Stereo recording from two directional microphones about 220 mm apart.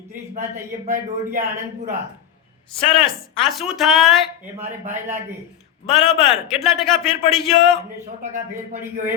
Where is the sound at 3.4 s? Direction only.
Centre (ahead or behind).